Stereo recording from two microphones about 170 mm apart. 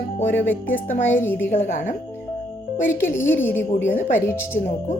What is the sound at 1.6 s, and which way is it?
Speech, 50° left (ahead or behind).